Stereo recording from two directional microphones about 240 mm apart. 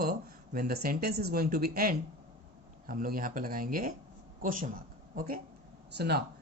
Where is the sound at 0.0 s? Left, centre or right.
Right.